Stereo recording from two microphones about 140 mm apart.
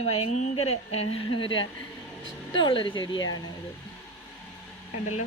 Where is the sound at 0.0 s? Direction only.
50° left (ahead or behind); by 3.4 s 30° left (ahead or behind).